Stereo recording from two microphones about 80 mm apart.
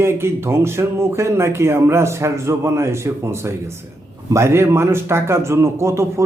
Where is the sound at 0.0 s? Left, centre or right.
Right.